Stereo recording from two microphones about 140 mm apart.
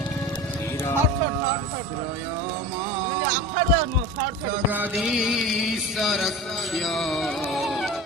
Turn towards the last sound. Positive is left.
turn(degrees=0)  # may be behind; listen again after turning